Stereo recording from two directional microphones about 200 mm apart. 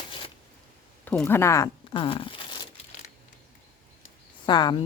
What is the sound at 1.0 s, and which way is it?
Speech, 10° left (ahead or behind).